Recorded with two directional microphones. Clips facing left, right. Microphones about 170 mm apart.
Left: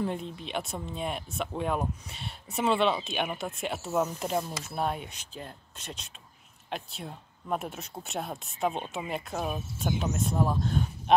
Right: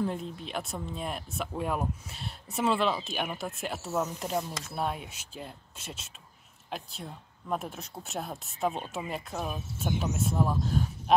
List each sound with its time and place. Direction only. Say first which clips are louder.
0.0 s speech: even; centre (ahead or behind)